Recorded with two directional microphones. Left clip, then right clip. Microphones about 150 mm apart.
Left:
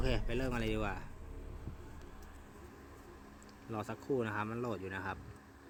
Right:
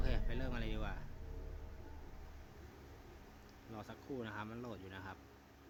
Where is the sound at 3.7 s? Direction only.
30° left (ahead or behind).